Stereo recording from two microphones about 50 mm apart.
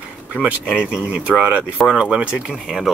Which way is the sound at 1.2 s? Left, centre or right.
Right.